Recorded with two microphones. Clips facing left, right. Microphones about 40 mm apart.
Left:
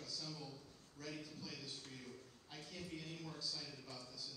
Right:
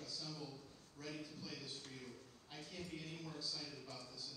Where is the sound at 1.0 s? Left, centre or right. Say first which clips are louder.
Even; right.